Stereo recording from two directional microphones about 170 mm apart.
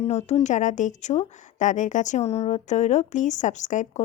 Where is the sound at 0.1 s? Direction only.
40° left (ahead or behind).